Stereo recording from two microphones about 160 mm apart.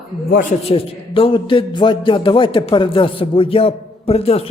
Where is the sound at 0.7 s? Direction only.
35° left (ahead or behind).